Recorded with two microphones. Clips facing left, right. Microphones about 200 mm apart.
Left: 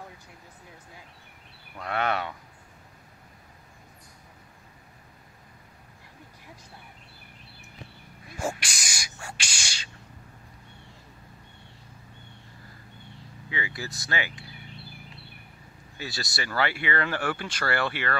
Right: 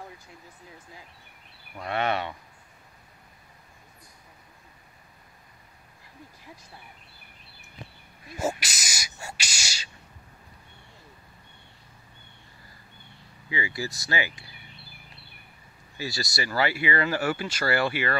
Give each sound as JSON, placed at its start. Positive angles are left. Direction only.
{"t": 1.8, "sound": "speech", "side_deg": -5}
{"t": 8.5, "sound": "speech", "side_deg": -5}
{"t": 13.5, "sound": "speech", "side_deg": -5}
{"t": 13.8, "sound": "speech", "side_deg": 60}
{"t": 16.0, "sound": "speech", "side_deg": -5}